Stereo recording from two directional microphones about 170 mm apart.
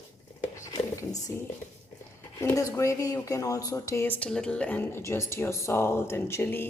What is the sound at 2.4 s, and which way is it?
Speech, 15° left (ahead or behind).